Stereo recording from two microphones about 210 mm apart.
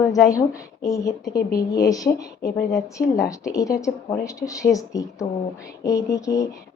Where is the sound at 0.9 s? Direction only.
15° left (ahead or behind).